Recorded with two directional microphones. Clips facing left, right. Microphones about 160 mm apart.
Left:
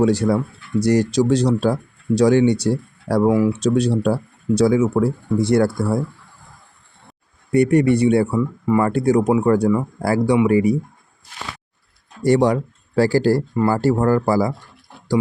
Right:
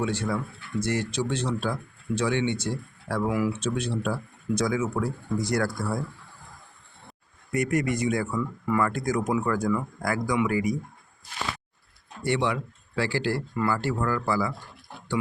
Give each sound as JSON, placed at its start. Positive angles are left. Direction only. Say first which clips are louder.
{"t": 0.0, "sound": "speech", "louder": "left 11 dB", "side_deg": 35}
{"t": 7.5, "sound": "speech", "louder": "left 11 dB", "side_deg": 30}
{"t": 12.2, "sound": "speech", "louder": "left 10 dB", "side_deg": 40}